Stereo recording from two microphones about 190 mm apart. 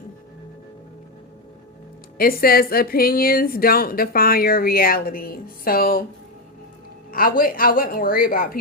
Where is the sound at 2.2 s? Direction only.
50° left (ahead or behind).